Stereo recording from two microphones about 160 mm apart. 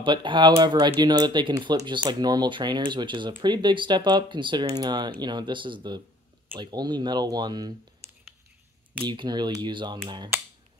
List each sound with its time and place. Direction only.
0.0 s speech: 30° right (ahead or behind)
9.0 s speech: 30° right (ahead or behind)